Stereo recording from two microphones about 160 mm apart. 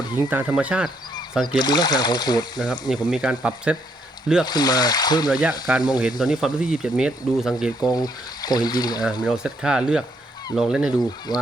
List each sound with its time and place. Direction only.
0.2 s speech: 10° right (ahead or behind)
1.5 s speech: 25° left (ahead or behind)
3.1 s speech: 5° right (ahead or behind)
4.4 s speech: 25° left (ahead or behind)
5.3 s speech: 5° right (ahead or behind)
7.9 s speech: 25° left (ahead or behind)
9.2 s speech: 5° right (ahead or behind)
11.3 s speech: 25° left (ahead or behind)